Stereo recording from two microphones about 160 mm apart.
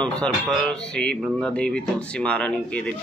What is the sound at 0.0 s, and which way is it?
Speech, 5° left (ahead or behind).